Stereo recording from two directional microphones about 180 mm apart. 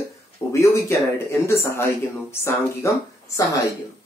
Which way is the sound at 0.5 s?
15° left (ahead or behind).